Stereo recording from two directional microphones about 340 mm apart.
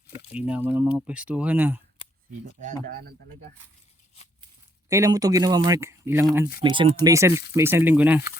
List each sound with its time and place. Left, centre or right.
0.3 s speech: centre
2.6 s speech: right
4.9 s speech: centre